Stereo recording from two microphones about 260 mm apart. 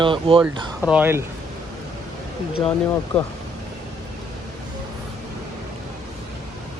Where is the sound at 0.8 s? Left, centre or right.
Centre.